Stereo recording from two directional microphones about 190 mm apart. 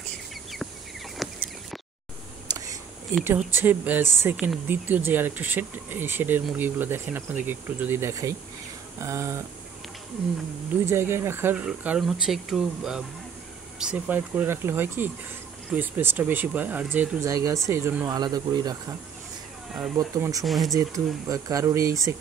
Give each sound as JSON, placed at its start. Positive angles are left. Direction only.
{"t": 1.1, "sound": "a sound", "side_deg": 0}
{"t": 2.5, "sound": "a sound", "side_deg": -15}
{"t": 3.3, "sound": "speech", "side_deg": -10}
{"t": 10.9, "sound": "speech", "side_deg": -15}
{"t": 20.0, "sound": "speech", "side_deg": -20}
{"t": 20.4, "sound": "speech", "side_deg": 0}
{"t": 20.7, "sound": "speech", "side_deg": -20}